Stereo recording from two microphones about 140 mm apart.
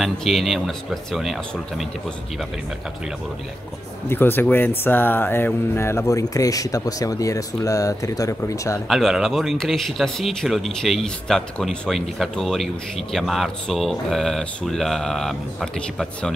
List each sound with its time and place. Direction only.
0.0 s speech: centre (ahead or behind)
4.1 s speech: 15° left (ahead or behind)
8.8 s speech: centre (ahead or behind)